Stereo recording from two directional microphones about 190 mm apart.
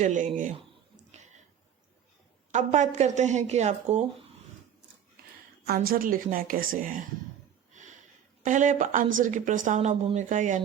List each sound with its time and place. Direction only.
0.0 s speech: 40° right (ahead or behind)
2.5 s speech: 40° right (ahead or behind)
5.6 s a woman's voice: 50° right (ahead or behind)
8.4 s speech: 40° right (ahead or behind)